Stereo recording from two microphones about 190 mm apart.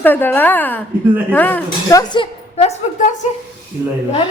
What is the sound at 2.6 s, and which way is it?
Speech, 40° left (ahead or behind).